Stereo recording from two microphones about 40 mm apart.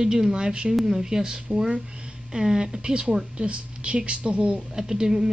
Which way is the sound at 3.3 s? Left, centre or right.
Right.